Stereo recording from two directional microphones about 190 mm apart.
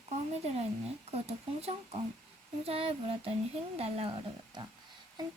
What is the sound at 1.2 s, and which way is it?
Speech, 35° right (ahead or behind).